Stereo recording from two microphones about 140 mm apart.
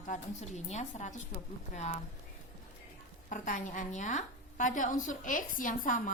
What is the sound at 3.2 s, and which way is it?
A woman's voice, 65° left (ahead or behind).